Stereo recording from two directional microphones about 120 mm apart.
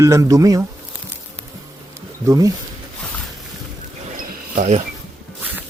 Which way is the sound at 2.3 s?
30° right (ahead or behind).